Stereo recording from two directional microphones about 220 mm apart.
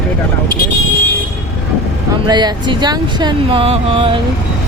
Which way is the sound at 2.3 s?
20° right (ahead or behind).